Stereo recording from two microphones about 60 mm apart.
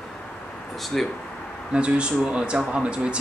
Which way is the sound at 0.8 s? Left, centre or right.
Centre.